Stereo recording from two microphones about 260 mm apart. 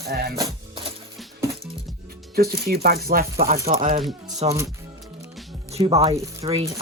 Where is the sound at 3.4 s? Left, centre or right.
Right.